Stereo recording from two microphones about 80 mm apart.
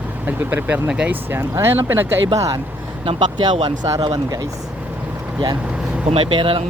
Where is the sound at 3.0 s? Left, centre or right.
Right.